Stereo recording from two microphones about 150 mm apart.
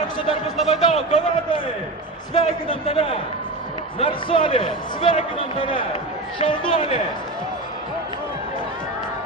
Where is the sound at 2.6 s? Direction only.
40° left (ahead or behind).